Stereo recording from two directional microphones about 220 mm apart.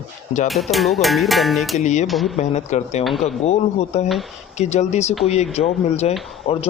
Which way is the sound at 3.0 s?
Centre (ahead or behind).